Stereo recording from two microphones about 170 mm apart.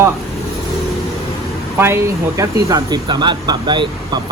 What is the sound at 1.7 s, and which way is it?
Speech, 15° right (ahead or behind).